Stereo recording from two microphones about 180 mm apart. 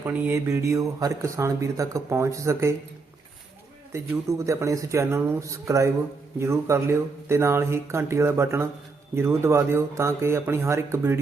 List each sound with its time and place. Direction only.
0.0 s speech: 10° right (ahead or behind)
4.1 s speech: 15° right (ahead or behind)